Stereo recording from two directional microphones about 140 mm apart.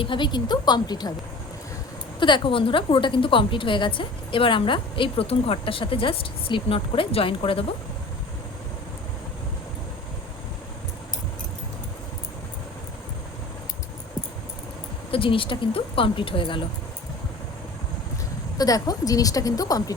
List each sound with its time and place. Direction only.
0.0 s a woman's voice: 35° left (ahead or behind)
2.1 s a woman's voice: 35° left (ahead or behind)
15.1 s a woman's voice: 40° left (ahead or behind)
18.5 s a woman's voice: 25° left (ahead or behind)